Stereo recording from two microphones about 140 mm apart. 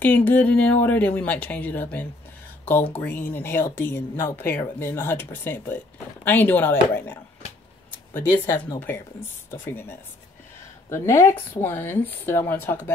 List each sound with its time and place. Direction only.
0.0 s speech: 15° left (ahead or behind)